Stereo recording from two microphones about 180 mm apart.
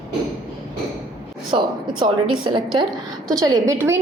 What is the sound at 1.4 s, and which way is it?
A woman's voice, 25° right (ahead or behind).